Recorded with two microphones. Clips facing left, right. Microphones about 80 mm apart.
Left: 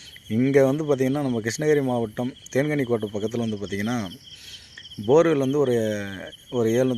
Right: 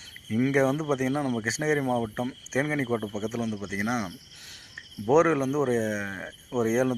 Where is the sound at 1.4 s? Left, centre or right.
Centre.